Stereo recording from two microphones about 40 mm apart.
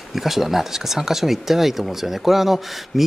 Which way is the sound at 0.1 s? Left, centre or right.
Centre.